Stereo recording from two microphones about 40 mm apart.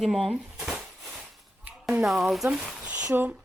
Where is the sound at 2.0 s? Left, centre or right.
Centre.